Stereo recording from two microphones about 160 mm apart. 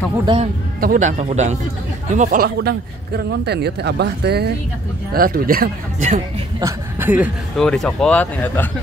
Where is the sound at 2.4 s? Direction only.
80° right.